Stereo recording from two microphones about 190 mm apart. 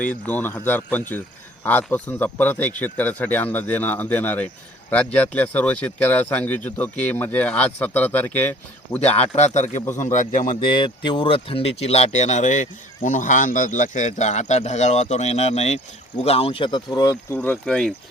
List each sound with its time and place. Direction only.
0.0 s speech: 10° left (ahead or behind)
9.0 s speech: 35° left (ahead or behind)
10.7 s speech: 25° left (ahead or behind)
17.3 s speech: 5° left (ahead or behind)